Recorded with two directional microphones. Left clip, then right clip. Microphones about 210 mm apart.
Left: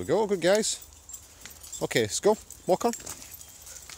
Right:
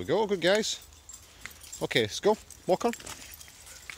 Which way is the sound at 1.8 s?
10° left (ahead or behind).